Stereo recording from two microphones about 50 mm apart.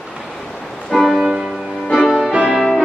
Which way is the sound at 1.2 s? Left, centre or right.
Centre.